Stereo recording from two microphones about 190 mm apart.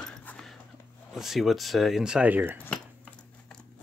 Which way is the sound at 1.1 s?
Centre (ahead or behind).